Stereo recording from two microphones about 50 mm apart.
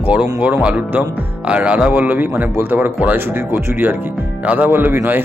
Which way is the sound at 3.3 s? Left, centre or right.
Right.